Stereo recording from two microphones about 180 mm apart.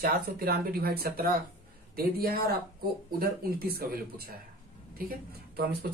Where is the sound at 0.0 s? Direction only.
55° right (ahead or behind).